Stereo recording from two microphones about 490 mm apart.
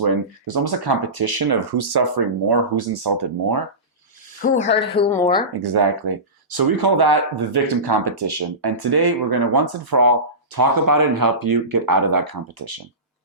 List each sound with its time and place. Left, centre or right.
0.0 s speech: right
4.4 s speech: centre
5.5 s speech: right